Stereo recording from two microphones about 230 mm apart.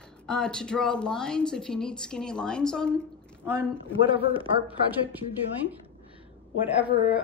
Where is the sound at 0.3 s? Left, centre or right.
Centre.